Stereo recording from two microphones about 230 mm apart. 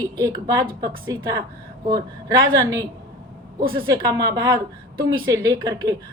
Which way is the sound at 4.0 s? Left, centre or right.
Centre.